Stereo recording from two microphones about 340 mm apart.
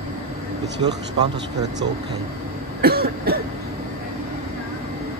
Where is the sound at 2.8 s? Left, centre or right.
Right.